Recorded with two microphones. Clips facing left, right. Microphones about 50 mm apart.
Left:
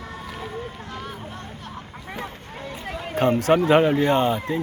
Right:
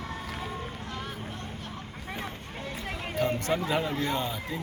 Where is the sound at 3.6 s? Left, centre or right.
Left.